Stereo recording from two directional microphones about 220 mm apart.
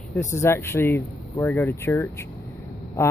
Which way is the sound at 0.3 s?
10° left (ahead or behind).